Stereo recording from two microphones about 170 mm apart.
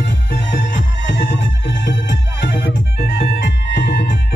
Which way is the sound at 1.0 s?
90° left.